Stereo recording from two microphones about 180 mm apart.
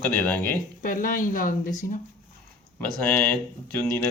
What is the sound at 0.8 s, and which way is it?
Speech, 50° left (ahead or behind).